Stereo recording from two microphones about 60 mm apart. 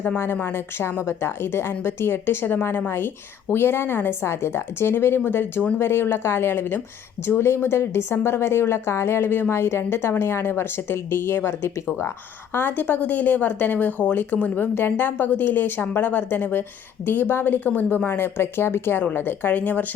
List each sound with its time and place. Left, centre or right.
0.3 s a woman's voice: left
12.5 s speech: left